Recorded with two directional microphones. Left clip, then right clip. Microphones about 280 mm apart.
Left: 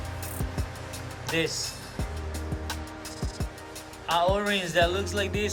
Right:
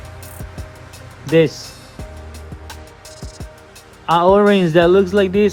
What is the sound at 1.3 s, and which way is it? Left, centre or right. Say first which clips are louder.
Speech: right 15 dB; centre.